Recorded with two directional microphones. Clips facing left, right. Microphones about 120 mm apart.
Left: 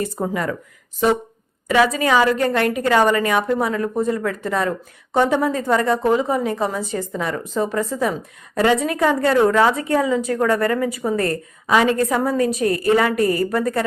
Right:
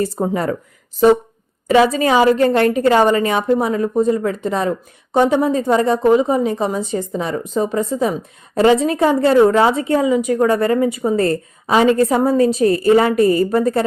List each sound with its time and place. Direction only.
0.2 s speech: 30° right (ahead or behind)
1.6 s a woman's voice: 30° right (ahead or behind)